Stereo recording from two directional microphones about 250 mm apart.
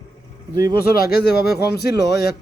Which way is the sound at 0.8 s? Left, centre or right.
Left.